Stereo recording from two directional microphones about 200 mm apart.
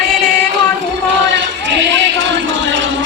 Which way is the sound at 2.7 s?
65° right (ahead or behind).